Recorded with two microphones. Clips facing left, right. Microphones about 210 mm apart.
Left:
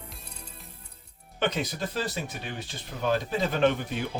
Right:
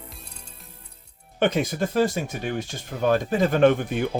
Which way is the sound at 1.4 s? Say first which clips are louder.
Right 6 dB; 50° right (ahead or behind).